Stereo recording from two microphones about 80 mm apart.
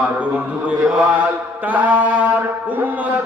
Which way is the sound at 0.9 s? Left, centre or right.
Centre.